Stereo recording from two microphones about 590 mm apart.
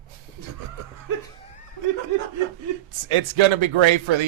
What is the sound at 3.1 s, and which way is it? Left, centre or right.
Speech, right.